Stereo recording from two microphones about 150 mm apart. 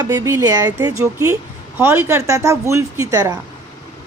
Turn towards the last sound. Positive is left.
turn(degrees=-20)  # may be behind; listen again after turning